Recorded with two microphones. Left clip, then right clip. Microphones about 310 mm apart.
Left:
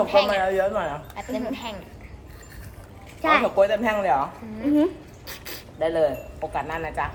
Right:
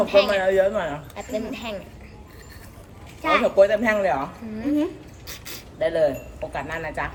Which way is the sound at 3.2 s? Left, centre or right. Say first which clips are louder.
Left 1 dB; centre.